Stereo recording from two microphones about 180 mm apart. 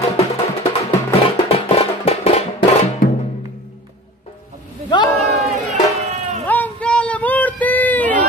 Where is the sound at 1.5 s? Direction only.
35° left (ahead or behind).